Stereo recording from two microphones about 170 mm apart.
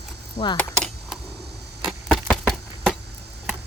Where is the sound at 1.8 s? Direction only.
5° left (ahead or behind).